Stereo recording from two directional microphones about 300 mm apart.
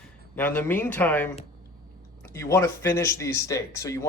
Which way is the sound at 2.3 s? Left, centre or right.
Centre.